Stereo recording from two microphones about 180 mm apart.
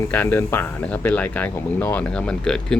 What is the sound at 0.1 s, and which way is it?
A man's voice, 10° left (ahead or behind).